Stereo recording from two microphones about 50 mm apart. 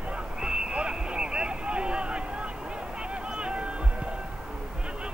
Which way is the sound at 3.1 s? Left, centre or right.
Centre.